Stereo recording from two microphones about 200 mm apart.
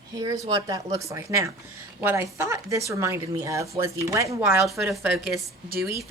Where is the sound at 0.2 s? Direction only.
20° right (ahead or behind).